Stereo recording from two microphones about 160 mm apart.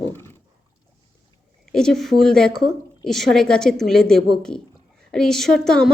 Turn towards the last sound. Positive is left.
turn(degrees=5)  # may be behind; listen again after turning